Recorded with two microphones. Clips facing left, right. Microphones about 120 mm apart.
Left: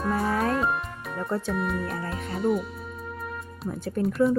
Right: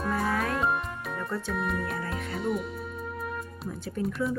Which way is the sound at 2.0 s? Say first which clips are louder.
Left 2 dB; 35° left (ahead or behind).